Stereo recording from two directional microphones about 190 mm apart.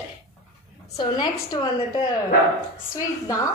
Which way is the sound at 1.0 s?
20° left (ahead or behind).